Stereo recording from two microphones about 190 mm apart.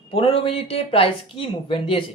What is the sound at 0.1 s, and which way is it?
Speech, 30° left (ahead or behind).